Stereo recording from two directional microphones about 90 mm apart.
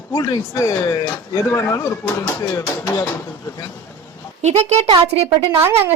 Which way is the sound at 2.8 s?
35° left (ahead or behind).